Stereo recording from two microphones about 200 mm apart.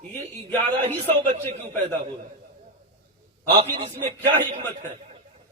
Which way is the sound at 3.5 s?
30° right (ahead or behind).